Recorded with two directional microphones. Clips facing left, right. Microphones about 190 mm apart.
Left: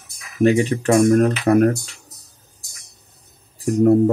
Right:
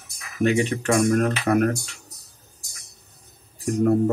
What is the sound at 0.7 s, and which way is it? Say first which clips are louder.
Speech: left 6 dB; 35° left (ahead or behind).